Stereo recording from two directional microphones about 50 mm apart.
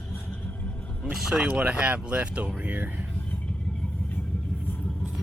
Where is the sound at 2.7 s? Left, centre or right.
Right.